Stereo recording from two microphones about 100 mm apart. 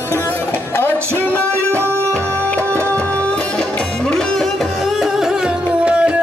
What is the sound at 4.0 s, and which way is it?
Music, 5° left (ahead or behind).